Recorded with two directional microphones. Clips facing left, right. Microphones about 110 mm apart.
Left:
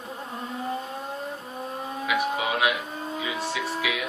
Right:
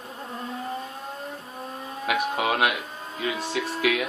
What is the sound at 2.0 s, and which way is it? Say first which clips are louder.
Speech: right 2 dB; 55° right (ahead or behind).